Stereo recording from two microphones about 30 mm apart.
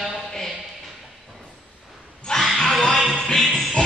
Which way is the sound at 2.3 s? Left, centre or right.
Left.